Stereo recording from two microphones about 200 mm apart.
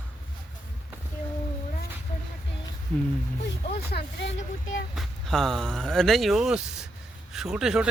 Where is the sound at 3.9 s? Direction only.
60° left (ahead or behind).